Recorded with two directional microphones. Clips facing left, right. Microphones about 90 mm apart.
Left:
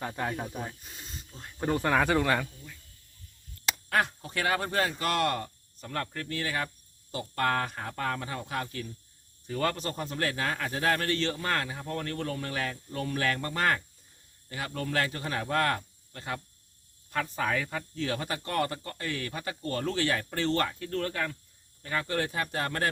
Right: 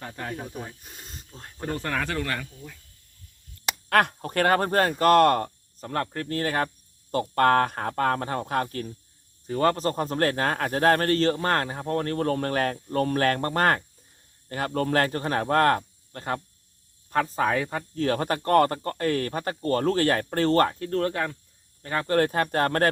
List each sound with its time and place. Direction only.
0.2 s speech: 20° left (ahead or behind)
0.9 s snake: 50° right (ahead or behind)
1.3 s speech: 45° right (ahead or behind)
1.6 s speech: 15° left (ahead or behind)
3.8 s speech: 60° right (ahead or behind)